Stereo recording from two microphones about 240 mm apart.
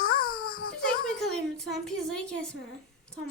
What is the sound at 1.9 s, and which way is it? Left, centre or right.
Speech, centre.